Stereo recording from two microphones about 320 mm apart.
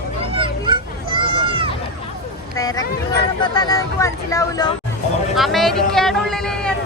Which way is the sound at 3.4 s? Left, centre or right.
Centre.